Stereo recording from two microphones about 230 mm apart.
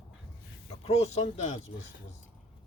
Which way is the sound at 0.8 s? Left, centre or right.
Left.